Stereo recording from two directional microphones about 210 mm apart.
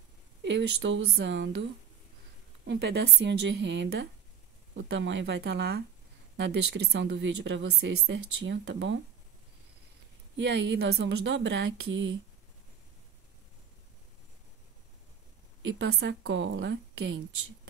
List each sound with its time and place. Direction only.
0.4 s a woman's voice: 55° right (ahead or behind)
2.6 s a woman's voice: 55° right (ahead or behind)
10.3 s a woman's voice: 55° right (ahead or behind)
15.6 s a woman's voice: 55° right (ahead or behind)